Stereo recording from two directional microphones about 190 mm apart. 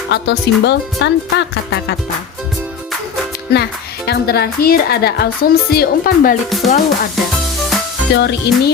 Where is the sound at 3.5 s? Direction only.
60° left (ahead or behind).